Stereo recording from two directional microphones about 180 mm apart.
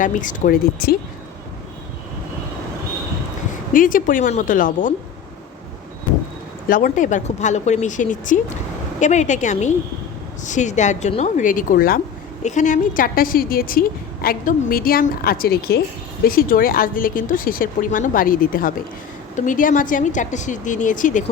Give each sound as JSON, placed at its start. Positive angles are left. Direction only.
{"t": 0.0, "sound": "a woman's voice", "side_deg": 45}
{"t": 3.7, "sound": "a woman's voice", "side_deg": 50}
{"t": 6.7, "sound": "a woman's voice", "side_deg": 50}
{"t": 12.4, "sound": "a woman's voice", "side_deg": 40}